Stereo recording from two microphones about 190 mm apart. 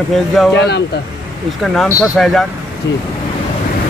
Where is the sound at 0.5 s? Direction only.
65° left (ahead or behind).